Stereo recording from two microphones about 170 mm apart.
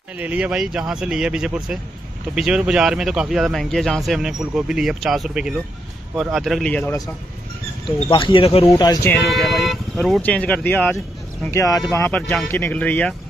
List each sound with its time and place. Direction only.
0.2 s speech: 10° right (ahead or behind); by 7.0 s 10° left (ahead or behind)
8.1 s speech: 30° left (ahead or behind)
9.1 s speech: centre (ahead or behind)